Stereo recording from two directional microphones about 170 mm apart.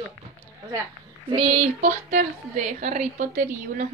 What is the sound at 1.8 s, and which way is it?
A woman's voice, 45° right (ahead or behind).